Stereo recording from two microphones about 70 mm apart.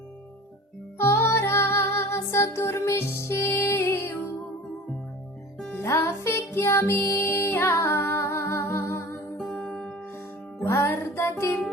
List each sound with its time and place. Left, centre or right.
0.9 s music: left
5.8 s music: left
9.5 s music: centre
10.6 s music: left